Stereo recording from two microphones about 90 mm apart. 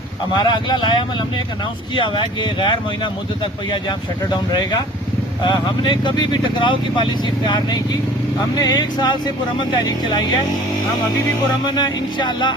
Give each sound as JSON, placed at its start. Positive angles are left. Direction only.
{"t": 0.3, "sound": "speech", "side_deg": 50}
{"t": 2.0, "sound": "speech", "side_deg": 65}
{"t": 5.4, "sound": "speech", "side_deg": 60}
{"t": 11.6, "sound": "speech", "side_deg": 50}